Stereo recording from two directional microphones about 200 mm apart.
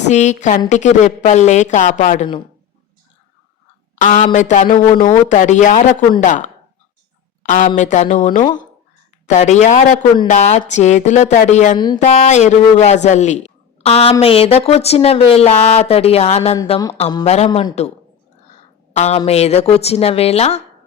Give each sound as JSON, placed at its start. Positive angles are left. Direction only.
{"t": 0.1, "sound": "speech", "side_deg": 35}
{"t": 3.9, "sound": "a sound", "side_deg": 40}
{"t": 4.3, "sound": "speech", "side_deg": 40}
{"t": 16.6, "sound": "speech", "side_deg": 20}
{"t": 17.2, "sound": "speech", "side_deg": 30}
{"t": 18.9, "sound": "speech", "side_deg": 35}